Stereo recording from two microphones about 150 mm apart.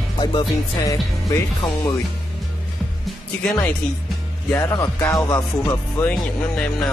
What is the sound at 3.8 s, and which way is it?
Music, 10° left (ahead or behind).